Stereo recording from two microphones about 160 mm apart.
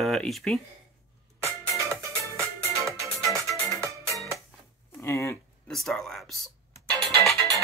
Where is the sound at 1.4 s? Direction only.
20° right (ahead or behind).